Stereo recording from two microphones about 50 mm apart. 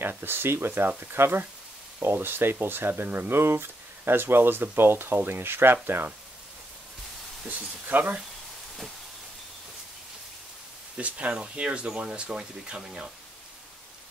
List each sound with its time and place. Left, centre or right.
0.0 s speech: right
7.4 s speech: right
11.0 s speech: right